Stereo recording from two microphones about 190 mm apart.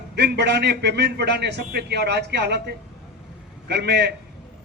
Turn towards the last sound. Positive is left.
turn(degrees=-60)  # may be behind; listen again after turning